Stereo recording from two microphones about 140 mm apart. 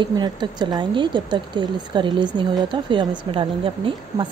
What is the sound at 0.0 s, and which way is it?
Speech, 30° right (ahead or behind).